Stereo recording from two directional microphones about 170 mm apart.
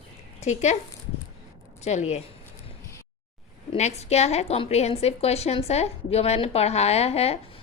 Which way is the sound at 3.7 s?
40° left (ahead or behind).